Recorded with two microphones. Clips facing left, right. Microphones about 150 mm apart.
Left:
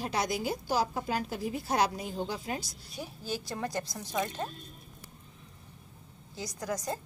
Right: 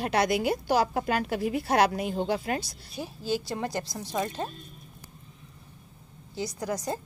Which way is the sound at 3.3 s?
30° right (ahead or behind).